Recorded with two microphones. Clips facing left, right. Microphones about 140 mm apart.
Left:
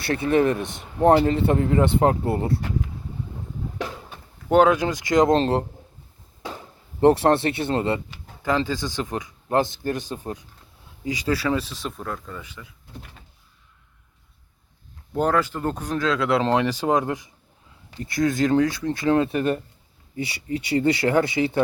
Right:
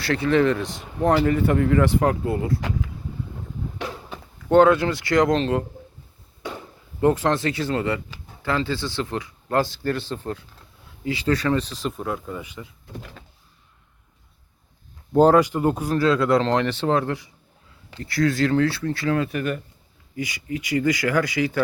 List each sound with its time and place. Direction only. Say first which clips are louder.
0.0 s speech: even; 20° left (ahead or behind)
4.4 s speech: right 2 dB; 15° left (ahead or behind)
5.4 s a man's voice: left 1 dB; 35° left (ahead or behind)
7.0 s speech: left 3 dB; 35° left (ahead or behind); by 12.6 s 15° right (ahead or behind)
15.1 s speech: right 7 dB; 30° right (ahead or behind)
15.4 s speech: right 5 dB; 15° right (ahead or behind)
16.4 s speech: even; 10° left (ahead or behind)